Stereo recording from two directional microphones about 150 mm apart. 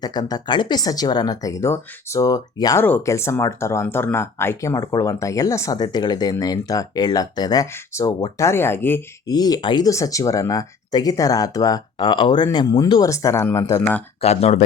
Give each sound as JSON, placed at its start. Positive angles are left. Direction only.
{"t": 0.0, "sound": "speech", "side_deg": 25}
{"t": 9.3, "sound": "speech", "side_deg": 25}
{"t": 14.2, "sound": "speech", "side_deg": 45}